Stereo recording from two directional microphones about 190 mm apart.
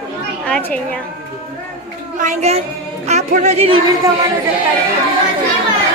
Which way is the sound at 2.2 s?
35° right (ahead or behind).